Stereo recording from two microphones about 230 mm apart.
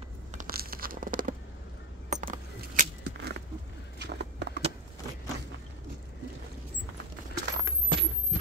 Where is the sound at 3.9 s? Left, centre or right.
Right.